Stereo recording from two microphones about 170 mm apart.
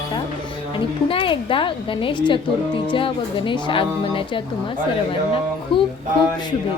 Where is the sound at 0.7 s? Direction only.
30° left (ahead or behind).